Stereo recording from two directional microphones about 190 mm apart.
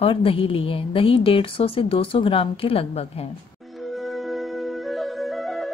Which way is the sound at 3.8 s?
Centre (ahead or behind).